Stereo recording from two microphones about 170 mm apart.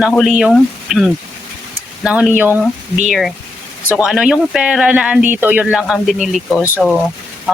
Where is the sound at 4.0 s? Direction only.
5° right (ahead or behind).